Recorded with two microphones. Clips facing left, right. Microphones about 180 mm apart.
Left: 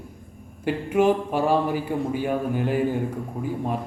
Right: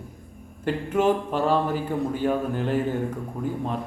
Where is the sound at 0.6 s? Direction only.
10° left (ahead or behind).